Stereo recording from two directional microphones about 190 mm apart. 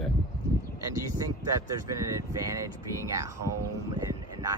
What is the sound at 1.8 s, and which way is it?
Speech, 15° right (ahead or behind).